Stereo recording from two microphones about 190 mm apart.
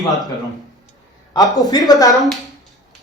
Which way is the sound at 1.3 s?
20° left (ahead or behind).